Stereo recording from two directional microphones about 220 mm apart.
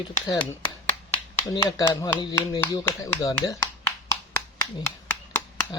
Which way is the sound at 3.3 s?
10° left (ahead or behind).